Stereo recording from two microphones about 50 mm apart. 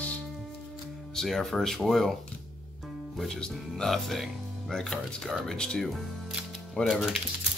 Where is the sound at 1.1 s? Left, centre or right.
Centre.